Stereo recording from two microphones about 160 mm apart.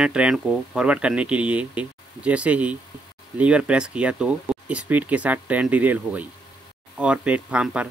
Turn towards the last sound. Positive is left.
turn(degrees=-5)  # may be behind; listen again after turning